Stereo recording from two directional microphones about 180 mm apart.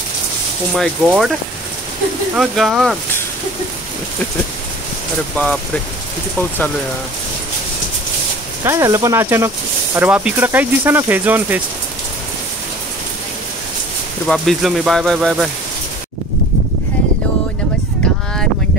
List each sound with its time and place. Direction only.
0.7 s speech: centre (ahead or behind)
2.3 s speech: centre (ahead or behind)
5.4 s speech: 10° left (ahead or behind)
8.6 s speech: 15° right (ahead or behind)
14.2 s speech: centre (ahead or behind)